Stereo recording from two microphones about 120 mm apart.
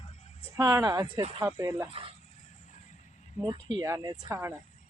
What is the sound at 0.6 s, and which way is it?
Speech, 35° right (ahead or behind).